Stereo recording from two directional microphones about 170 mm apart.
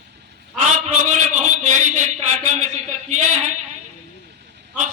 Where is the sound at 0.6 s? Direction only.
45° right (ahead or behind).